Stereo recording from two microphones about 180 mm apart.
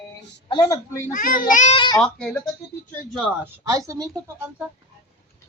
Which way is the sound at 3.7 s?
20° right (ahead or behind).